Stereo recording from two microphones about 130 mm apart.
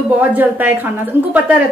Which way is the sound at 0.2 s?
15° right (ahead or behind).